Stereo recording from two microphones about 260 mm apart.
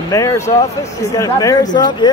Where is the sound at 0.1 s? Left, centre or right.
Centre.